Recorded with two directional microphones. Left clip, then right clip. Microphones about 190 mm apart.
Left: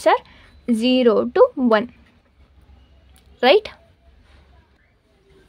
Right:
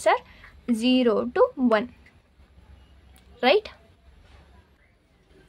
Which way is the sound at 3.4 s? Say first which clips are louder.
Left 6 dB; 35° left (ahead or behind).